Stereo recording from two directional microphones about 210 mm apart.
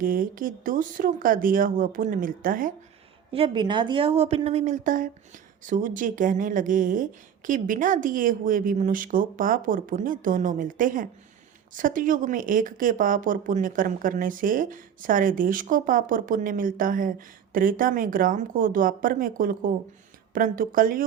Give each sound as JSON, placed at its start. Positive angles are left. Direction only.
{"t": 0.0, "sound": "speech", "side_deg": -40}
{"t": 3.3, "sound": "speech", "side_deg": -25}